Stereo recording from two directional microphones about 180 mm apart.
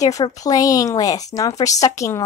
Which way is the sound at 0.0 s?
20° left (ahead or behind).